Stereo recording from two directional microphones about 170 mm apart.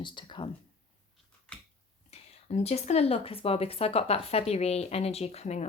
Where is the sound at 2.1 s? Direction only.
40° left (ahead or behind).